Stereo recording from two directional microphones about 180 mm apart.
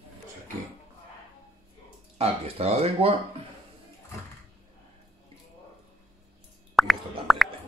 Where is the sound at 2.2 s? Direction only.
35° right (ahead or behind).